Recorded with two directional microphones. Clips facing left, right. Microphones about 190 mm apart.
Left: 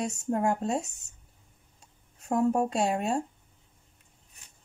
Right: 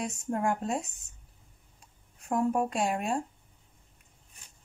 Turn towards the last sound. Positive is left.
turn(degrees=25)  # may be behind; listen again after turning